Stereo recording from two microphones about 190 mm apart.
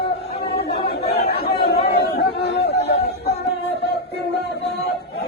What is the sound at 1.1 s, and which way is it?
Chatter, 60° left (ahead or behind).